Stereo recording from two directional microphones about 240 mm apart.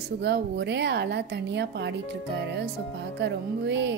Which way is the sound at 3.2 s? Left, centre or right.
Right.